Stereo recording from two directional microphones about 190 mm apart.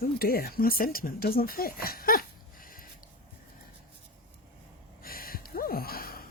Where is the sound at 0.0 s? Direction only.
50° left (ahead or behind).